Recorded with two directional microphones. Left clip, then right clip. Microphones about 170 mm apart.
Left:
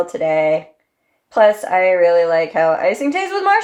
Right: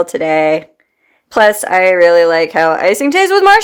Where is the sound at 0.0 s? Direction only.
45° right (ahead or behind).